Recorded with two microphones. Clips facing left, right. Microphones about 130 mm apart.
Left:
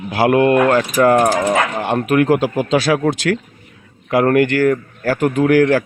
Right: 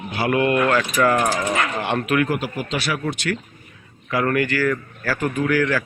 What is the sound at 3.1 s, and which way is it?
Speech, 90° left.